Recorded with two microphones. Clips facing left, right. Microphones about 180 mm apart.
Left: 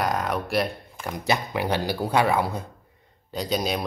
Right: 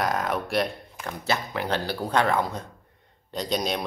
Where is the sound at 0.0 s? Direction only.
Centre (ahead or behind).